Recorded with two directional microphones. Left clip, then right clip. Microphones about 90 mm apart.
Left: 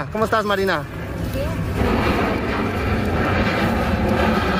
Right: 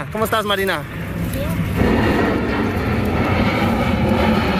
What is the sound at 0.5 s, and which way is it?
Speech, 20° left (ahead or behind).